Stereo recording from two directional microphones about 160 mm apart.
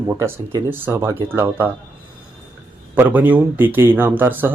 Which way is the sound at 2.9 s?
10° right (ahead or behind).